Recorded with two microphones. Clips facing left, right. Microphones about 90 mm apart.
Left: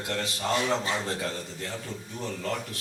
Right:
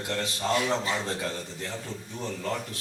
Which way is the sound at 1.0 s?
20° right (ahead or behind).